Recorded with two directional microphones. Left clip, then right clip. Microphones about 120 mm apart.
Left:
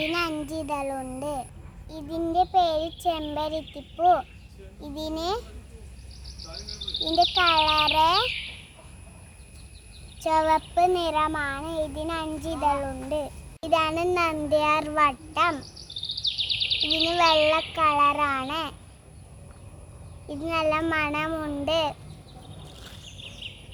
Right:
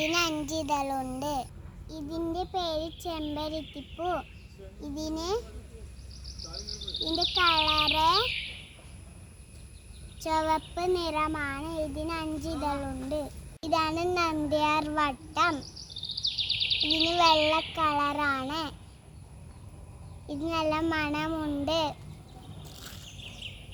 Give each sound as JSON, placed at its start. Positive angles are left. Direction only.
{"t": 0.1, "sound": "child singing", "side_deg": -10}
{"t": 0.4, "sound": "a child's voice", "side_deg": -5}
{"t": 1.9, "sound": "a child's voice", "side_deg": 25}
{"t": 10.2, "sound": "child singing", "side_deg": 20}
{"t": 16.4, "sound": "a sound", "side_deg": 20}
{"t": 17.1, "sound": "child singing", "side_deg": 10}
{"t": 20.2, "sound": "child singing", "side_deg": 10}